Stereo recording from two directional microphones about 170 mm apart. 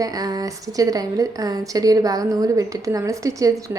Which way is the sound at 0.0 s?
20° right (ahead or behind).